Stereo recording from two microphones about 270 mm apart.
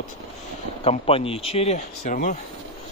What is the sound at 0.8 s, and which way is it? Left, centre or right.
Speech, left.